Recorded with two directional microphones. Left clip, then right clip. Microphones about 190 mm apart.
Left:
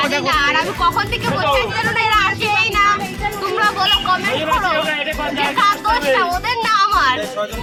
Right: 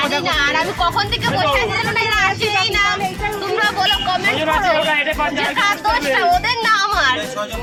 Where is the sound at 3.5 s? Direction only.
15° right (ahead or behind).